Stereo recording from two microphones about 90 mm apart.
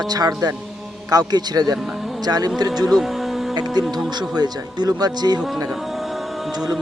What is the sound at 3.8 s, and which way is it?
A man's voice, 50° right (ahead or behind).